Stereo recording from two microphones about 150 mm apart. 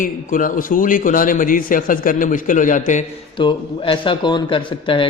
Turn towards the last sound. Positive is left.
turn(degrees=35)  # may be behind; listen again after turning